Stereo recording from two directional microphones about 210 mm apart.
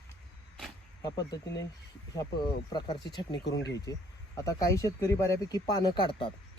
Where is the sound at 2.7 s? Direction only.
20° left (ahead or behind).